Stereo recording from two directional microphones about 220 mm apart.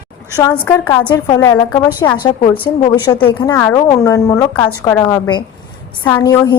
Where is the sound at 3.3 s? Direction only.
15° left (ahead or behind).